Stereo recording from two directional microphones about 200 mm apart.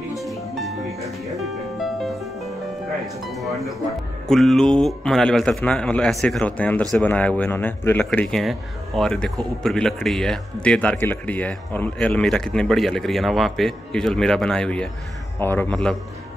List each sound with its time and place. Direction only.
0.1 s music: centre (ahead or behind)
3.3 s a man's voice: centre (ahead or behind)